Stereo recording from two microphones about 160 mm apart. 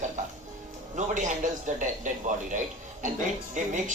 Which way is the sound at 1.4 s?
55° right (ahead or behind).